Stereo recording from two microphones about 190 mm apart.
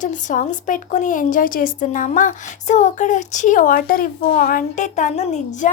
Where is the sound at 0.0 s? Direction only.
40° left (ahead or behind).